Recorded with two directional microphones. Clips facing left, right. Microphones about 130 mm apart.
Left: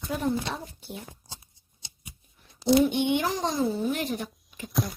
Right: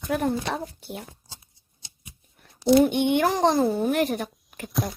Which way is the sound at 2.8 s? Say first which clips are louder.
Right 4 dB; 55° right (ahead or behind).